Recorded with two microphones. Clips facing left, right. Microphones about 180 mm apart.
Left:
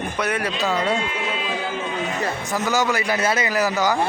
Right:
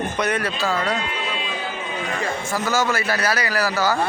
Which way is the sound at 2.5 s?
15° left (ahead or behind).